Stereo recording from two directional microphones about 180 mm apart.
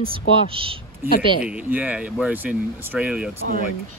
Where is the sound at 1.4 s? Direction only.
5° right (ahead or behind).